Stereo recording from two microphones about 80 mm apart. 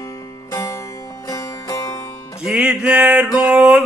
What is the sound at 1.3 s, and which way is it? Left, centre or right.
Music, left.